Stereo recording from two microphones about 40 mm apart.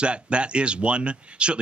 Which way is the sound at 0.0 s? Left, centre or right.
Right.